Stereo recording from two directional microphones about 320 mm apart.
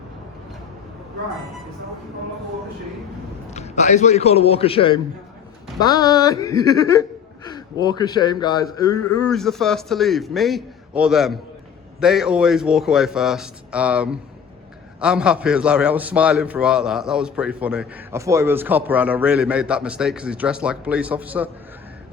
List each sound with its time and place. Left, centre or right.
3.5 s a man's voice: left
9.2 s a man's voice: centre